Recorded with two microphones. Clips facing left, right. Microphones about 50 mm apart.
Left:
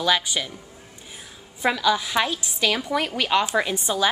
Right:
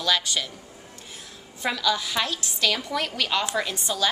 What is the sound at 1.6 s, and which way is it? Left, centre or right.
A woman's voice, centre.